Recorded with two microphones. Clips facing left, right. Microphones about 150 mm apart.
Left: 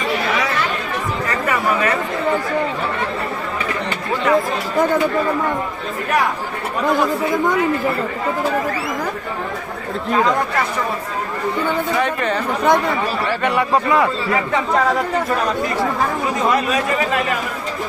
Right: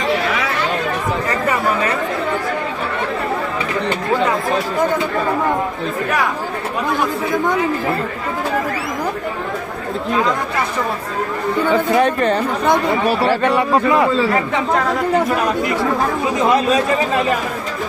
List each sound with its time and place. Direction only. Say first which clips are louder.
11.9 s speech: right 4 dB; 40° right (ahead or behind)